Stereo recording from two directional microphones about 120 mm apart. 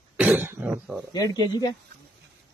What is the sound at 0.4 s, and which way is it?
Speech, 15° right (ahead or behind).